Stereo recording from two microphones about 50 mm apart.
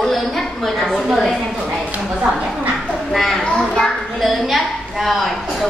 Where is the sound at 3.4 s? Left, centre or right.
Centre.